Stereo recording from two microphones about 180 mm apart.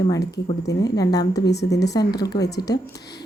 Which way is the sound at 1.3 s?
65° left (ahead or behind).